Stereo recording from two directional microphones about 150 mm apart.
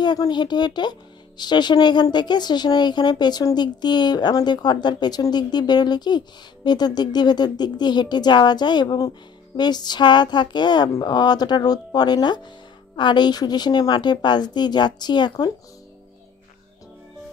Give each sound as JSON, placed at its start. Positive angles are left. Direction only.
{"t": 0.0, "sound": "speech", "side_deg": 30}